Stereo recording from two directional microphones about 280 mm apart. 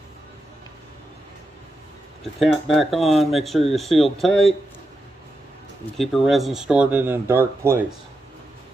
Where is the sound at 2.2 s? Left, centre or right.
Centre.